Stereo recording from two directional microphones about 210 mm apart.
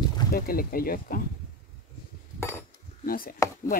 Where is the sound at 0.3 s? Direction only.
45° left (ahead or behind).